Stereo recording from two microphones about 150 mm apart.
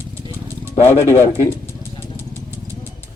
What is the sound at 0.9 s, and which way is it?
Speech, 15° left (ahead or behind).